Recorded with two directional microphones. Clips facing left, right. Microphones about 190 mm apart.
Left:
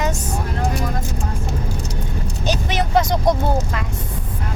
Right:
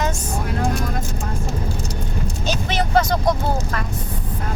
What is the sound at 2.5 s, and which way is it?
Vehicle, 15° left (ahead or behind).